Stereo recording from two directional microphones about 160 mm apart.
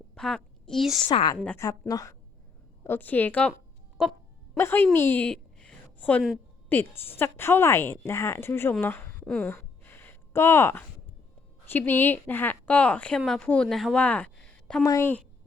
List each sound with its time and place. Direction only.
0.1 s a woman's voice: 5° left (ahead or behind)
1.0 s a woman's voice: 30° left (ahead or behind)
1.5 s a woman's voice: 15° left (ahead or behind)
4.5 s a sound: 15° left (ahead or behind)
6.7 s speech: 15° left (ahead or behind)
8.8 s a sound: 15° left (ahead or behind)
11.6 s a woman's voice: 10° left (ahead or behind)
14.8 s speech: 15° left (ahead or behind)